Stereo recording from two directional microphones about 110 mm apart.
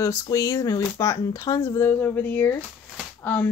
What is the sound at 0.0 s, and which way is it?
Speech, 30° left (ahead or behind).